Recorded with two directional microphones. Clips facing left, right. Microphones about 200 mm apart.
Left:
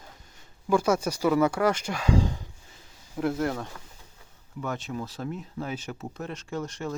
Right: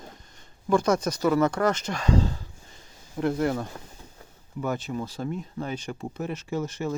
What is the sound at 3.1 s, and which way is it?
Speech, centre (ahead or behind).